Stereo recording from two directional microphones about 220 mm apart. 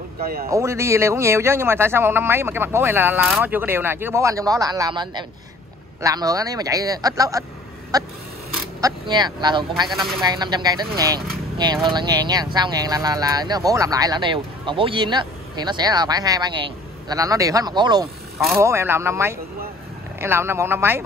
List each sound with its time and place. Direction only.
0.2 s speech: 45° right (ahead or behind)
0.5 s a man's voice: 15° right (ahead or behind)
9.8 s speech: centre (ahead or behind)
10.2 s a man's voice: 20° right (ahead or behind)